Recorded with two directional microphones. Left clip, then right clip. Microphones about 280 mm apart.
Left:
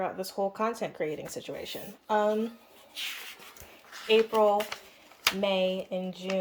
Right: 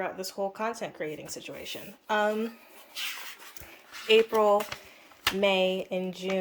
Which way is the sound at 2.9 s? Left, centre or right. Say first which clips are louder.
Right 1 dB; centre.